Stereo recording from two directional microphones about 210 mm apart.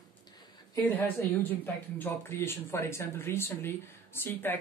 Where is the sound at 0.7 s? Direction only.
10° left (ahead or behind).